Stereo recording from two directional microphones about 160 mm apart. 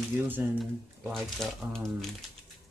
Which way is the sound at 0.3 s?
5° right (ahead or behind).